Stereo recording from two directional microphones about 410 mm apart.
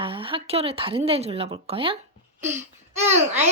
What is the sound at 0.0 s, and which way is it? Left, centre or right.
A child's voice, centre.